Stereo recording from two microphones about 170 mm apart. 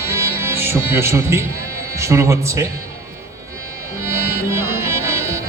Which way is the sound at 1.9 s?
15° right (ahead or behind).